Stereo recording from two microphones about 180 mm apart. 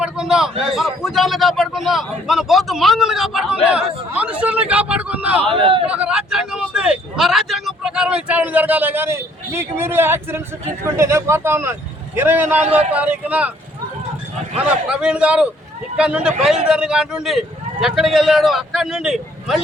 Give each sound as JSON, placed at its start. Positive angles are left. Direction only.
{"t": 0.0, "sound": "a man's voice", "side_deg": -5}
{"t": 5.4, "sound": "speech", "side_deg": -30}
{"t": 5.9, "sound": "speech", "side_deg": -5}
{"t": 14.8, "sound": "a man's voice", "side_deg": -5}